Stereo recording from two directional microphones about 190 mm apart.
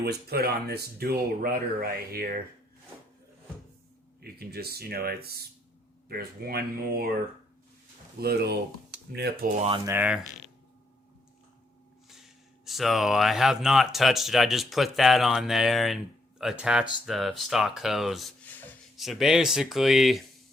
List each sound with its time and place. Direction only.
0.0 s speech: 55° right (ahead or behind)
4.2 s speech: 55° right (ahead or behind)
8.2 s speech: 55° right (ahead or behind)
9.6 s speech: 30° right (ahead or behind)
9.8 s speech: 10° right (ahead or behind)
12.6 s speech: centre (ahead or behind)